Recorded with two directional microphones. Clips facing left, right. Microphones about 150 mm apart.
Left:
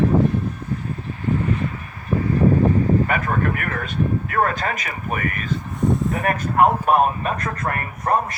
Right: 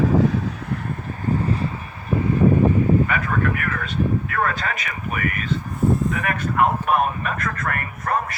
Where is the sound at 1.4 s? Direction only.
35° right (ahead or behind).